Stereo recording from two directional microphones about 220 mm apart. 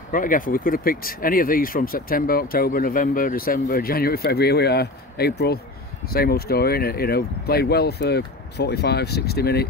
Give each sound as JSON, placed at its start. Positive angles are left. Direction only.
{"t": 0.1, "sound": "speech", "side_deg": 40}